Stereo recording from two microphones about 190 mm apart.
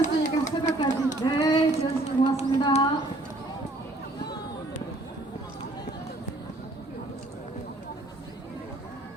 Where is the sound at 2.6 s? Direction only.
25° left (ahead or behind).